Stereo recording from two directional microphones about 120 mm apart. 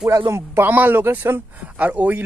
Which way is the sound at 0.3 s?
15° right (ahead or behind).